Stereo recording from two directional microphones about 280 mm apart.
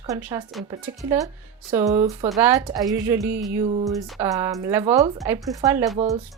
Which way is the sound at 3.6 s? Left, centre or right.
Right.